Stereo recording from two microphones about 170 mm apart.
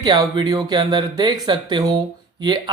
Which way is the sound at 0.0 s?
25° right (ahead or behind).